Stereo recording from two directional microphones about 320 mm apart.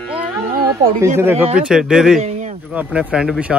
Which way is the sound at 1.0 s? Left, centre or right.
Centre.